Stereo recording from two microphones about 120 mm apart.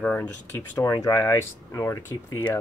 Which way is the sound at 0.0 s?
10° left (ahead or behind).